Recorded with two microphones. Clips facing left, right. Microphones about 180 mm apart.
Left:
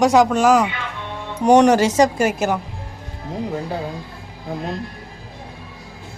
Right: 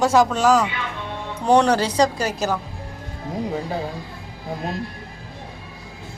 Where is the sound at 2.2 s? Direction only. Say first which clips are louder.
Left 5 dB; 50° left (ahead or behind).